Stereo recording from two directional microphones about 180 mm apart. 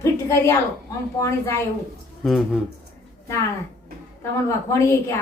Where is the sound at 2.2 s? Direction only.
Centre (ahead or behind).